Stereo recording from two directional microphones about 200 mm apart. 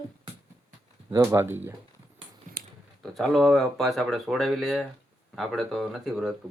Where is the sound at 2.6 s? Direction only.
45° right (ahead or behind).